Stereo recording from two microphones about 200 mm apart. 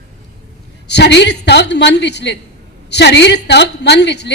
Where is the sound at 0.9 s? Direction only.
60° left (ahead or behind).